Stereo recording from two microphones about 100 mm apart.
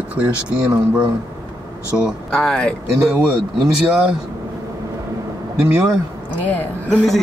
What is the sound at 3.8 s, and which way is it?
Speech, 5° right (ahead or behind).